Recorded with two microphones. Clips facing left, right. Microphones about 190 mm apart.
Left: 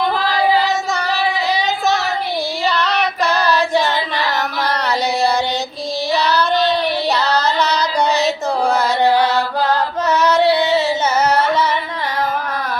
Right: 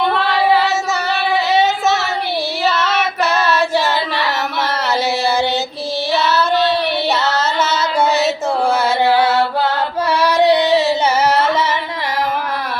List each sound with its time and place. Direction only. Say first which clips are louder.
0.2 s child singing: right 2 dB; 65° right (ahead or behind)
2.6 s child singing: right 1 dB; 5° right (ahead or behind)
6.1 s child singing: right 1 dB; 5° right (ahead or behind)
7.3 s carnatic music: left 1 dB; 5° right (ahead or behind)
9.2 s carnatic music: right 2 dB; 25° right (ahead or behind)
10.2 s a sound: right 2 dB; 15° right (ahead or behind)
10.7 s carnatic music: right 2 dB; 70° right (ahead or behind)